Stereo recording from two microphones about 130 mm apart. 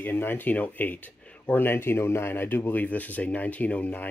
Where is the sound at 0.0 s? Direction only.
15° left (ahead or behind).